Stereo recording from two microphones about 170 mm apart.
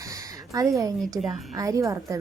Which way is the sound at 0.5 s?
20° right (ahead or behind).